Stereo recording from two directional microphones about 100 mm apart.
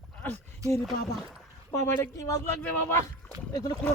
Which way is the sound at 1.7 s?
30° left (ahead or behind).